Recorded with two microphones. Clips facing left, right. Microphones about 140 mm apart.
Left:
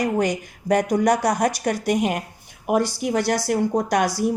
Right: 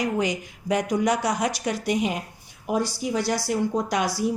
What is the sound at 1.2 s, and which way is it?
Speech, 40° left (ahead or behind).